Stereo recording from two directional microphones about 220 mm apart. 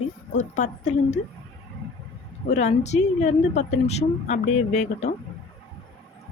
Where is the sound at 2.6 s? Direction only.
30° left (ahead or behind).